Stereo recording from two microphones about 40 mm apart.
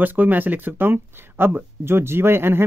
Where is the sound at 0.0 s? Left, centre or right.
Right.